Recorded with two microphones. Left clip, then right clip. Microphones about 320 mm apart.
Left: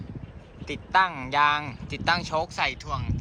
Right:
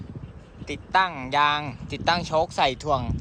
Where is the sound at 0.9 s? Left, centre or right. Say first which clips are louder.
Even; centre.